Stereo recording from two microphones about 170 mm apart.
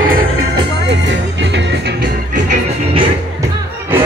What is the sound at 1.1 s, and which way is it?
Music, 90° right.